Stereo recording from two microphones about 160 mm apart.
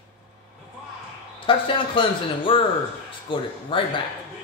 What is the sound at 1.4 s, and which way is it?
Speech, 35° left (ahead or behind).